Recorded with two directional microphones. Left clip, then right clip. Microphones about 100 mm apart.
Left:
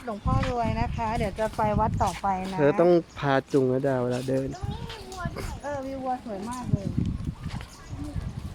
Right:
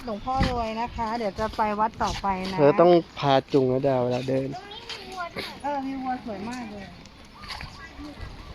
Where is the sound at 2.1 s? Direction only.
35° left (ahead or behind).